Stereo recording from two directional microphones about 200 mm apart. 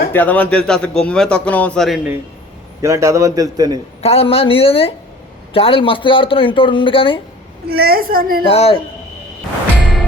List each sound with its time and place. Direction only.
0.1 s a man's voice: 10° left (ahead or behind)
2.8 s a man's voice: 15° right (ahead or behind)
4.0 s speech: 30° left (ahead or behind)
7.7 s a woman's voice: 50° right (ahead or behind)
8.4 s speech: 30° left (ahead or behind)